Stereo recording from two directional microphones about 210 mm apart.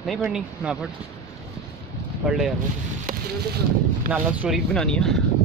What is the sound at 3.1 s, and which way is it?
Speech, 45° right (ahead or behind).